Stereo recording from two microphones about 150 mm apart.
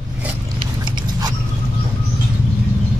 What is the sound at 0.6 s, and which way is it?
Biting, 30° right (ahead or behind).